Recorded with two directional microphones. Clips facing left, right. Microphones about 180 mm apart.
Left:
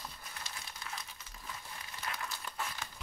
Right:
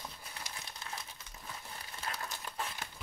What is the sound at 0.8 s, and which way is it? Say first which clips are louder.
Crumpling: even; 25° right (ahead or behind).